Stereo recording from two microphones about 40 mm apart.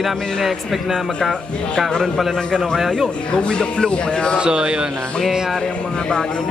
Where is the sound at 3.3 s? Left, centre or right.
Left.